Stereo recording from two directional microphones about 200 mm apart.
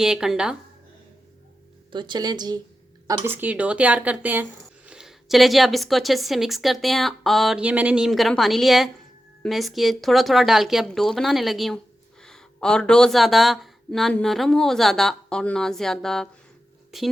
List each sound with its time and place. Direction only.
0.0 s speech: 5° right (ahead or behind)
1.9 s speech: 20° right (ahead or behind)
3.2 s speech: 10° right (ahead or behind)